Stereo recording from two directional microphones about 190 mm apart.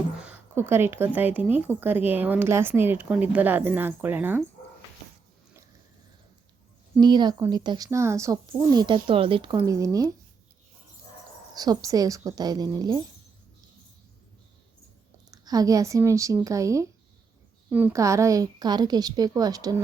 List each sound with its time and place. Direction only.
0.2 s a woman's voice: 10° right (ahead or behind)
7.0 s speech: 20° right (ahead or behind)
11.5 s speech: 20° right (ahead or behind)
15.3 s speech: 20° right (ahead or behind)